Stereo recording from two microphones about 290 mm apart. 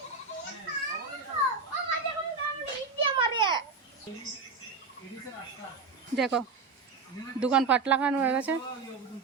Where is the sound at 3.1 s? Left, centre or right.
Centre.